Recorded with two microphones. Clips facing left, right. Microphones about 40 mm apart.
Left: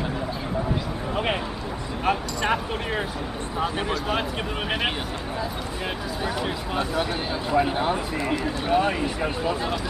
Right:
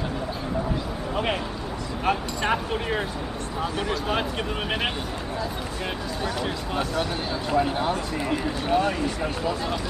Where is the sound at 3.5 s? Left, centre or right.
Centre.